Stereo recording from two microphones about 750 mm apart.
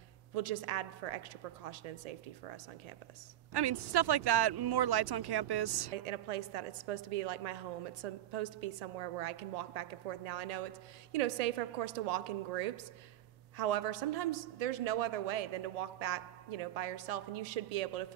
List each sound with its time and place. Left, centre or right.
0.3 s a woman's voice: right
3.5 s speech: right
6.0 s a woman's voice: right